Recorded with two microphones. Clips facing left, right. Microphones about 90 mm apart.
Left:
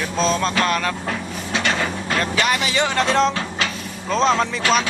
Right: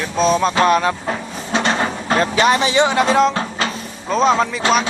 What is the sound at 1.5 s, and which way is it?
Vehicle, 30° right (ahead or behind).